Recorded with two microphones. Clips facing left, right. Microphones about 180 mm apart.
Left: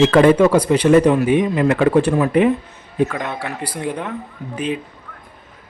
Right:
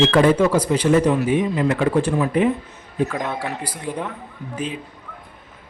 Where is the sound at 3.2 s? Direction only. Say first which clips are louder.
Even; 5° right (ahead or behind).